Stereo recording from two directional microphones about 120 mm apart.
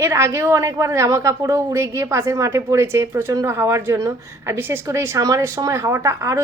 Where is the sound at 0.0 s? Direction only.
25° right (ahead or behind).